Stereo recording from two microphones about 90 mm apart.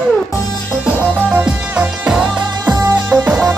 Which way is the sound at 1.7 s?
15° right (ahead or behind).